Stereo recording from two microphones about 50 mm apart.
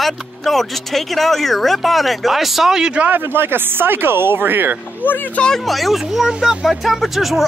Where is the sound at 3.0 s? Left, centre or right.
Right.